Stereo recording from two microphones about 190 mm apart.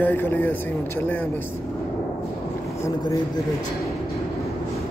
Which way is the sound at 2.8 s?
15° left (ahead or behind).